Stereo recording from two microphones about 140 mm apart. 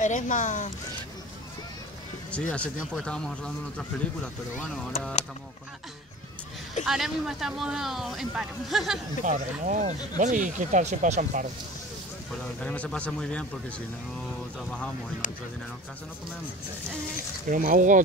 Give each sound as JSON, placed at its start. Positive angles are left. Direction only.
{"t": 0.0, "sound": "speech", "side_deg": 65}
{"t": 2.5, "sound": "speech", "side_deg": 10}
{"t": 6.8, "sound": "speech", "side_deg": 0}
{"t": 9.2, "sound": "speech", "side_deg": -65}
{"t": 12.3, "sound": "speech", "side_deg": 10}
{"t": 15.2, "sound": "speech", "side_deg": 60}
{"t": 17.5, "sound": "speech", "side_deg": -65}